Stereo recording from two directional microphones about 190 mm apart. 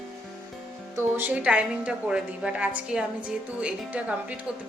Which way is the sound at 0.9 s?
10° right (ahead or behind).